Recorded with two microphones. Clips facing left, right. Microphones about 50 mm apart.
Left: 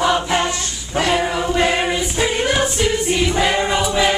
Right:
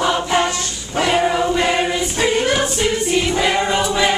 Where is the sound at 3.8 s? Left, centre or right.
Centre.